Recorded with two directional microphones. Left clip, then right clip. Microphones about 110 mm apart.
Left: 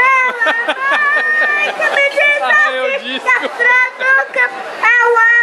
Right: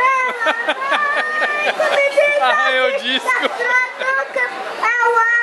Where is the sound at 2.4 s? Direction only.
5° right (ahead or behind).